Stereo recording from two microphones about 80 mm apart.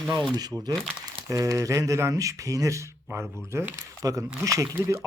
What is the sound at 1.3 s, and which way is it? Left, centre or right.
A man's voice, right.